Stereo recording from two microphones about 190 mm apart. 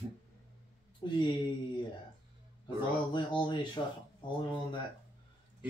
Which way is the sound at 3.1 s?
25° left (ahead or behind).